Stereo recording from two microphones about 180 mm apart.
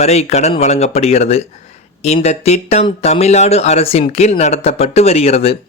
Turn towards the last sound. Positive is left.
turn(degrees=35)  # may be behind; listen again after turning